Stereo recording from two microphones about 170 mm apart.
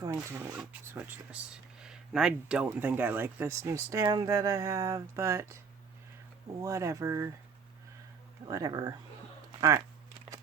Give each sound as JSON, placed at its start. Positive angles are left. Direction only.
{"t": 0.0, "sound": "speech", "side_deg": -15}
{"t": 6.6, "sound": "speech", "side_deg": -20}
{"t": 8.4, "sound": "speech", "side_deg": -20}